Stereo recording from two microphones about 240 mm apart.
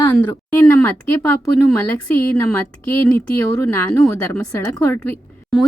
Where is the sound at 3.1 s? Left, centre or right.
Centre.